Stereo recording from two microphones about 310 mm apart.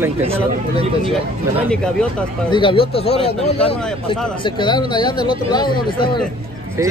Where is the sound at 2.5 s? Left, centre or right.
Centre.